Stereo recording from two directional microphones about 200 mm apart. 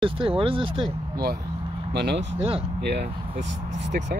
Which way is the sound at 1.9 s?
55° right (ahead or behind).